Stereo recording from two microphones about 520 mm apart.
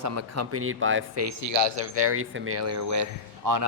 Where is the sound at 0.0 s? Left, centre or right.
Right.